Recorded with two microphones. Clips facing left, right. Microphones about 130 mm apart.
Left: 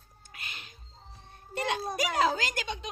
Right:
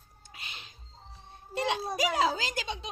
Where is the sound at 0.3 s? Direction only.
25° right (ahead or behind).